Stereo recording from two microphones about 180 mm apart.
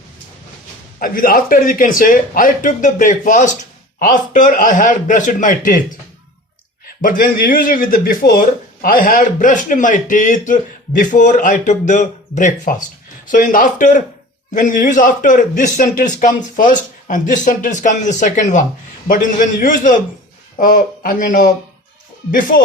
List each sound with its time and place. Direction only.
0.9 s speech: 50° left (ahead or behind)
6.8 s speech: 50° left (ahead or behind)